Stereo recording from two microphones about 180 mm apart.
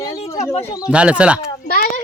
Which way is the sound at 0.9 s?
5° right (ahead or behind).